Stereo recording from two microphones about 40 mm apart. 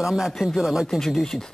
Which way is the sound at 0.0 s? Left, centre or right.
Centre.